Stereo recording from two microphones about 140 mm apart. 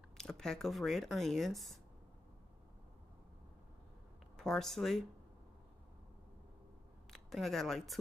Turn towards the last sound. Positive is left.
turn(degrees=0)  # may be behind; listen again after turning